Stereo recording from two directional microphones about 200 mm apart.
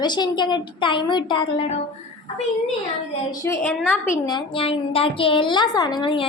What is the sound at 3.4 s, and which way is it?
A woman's voice, 10° left (ahead or behind).